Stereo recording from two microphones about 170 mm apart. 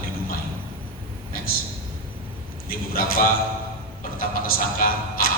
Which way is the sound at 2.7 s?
60° left (ahead or behind).